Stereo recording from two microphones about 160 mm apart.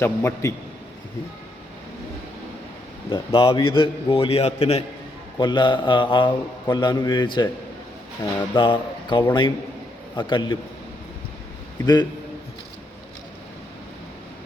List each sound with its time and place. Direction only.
0.0 s a man's voice: 15° left (ahead or behind)
3.1 s a man's voice: 35° left (ahead or behind)
5.4 s a man's voice: 30° left (ahead or behind)